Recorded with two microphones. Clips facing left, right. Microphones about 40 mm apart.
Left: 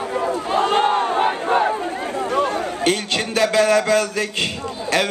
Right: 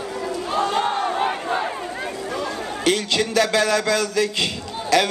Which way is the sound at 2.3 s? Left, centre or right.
Left.